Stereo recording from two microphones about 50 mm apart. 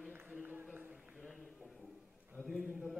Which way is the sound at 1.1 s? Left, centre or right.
Centre.